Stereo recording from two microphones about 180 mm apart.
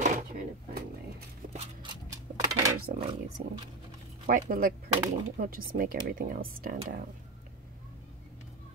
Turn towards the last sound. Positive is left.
turn(degrees=-50)  # may be behind; listen again after turning